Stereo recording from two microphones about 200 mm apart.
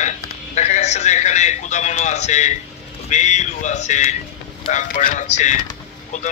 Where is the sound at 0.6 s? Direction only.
35° left (ahead or behind).